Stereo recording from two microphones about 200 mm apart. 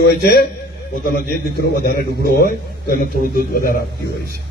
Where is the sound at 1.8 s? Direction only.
50° left (ahead or behind).